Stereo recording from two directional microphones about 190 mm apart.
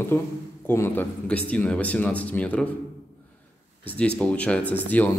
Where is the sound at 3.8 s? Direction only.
5° left (ahead or behind).